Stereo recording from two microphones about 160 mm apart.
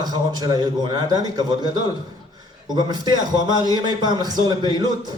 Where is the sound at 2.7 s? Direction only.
25° right (ahead or behind).